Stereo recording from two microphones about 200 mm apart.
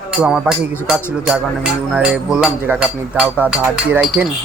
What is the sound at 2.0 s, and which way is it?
Speech, 5° right (ahead or behind).